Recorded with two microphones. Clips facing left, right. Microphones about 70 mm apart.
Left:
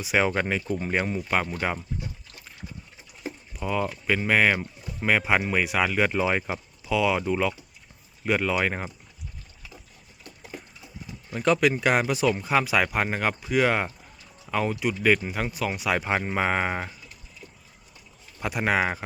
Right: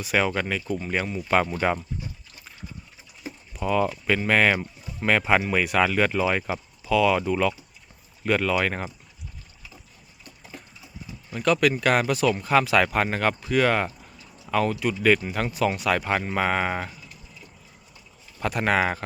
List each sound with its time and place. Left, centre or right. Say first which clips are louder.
0.0 s speech: even; centre
0.3 s speech: left 1 dB; left
1.3 s speech: right 6 dB; centre
3.6 s speech: right 4 dB; centre
11.3 s speech: even; left
18.3 s speech: right 2 dB; centre